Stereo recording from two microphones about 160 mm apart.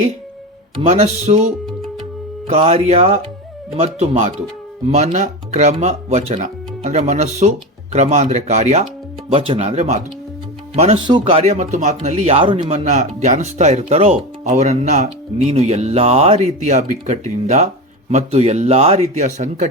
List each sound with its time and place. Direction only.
0.8 s speech: 40° right (ahead or behind)
2.5 s speech: 40° right (ahead or behind)
12.9 s speech: 45° right (ahead or behind)